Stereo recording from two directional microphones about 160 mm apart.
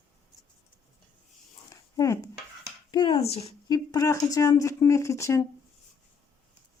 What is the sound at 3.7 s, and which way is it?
Speech, 20° left (ahead or behind).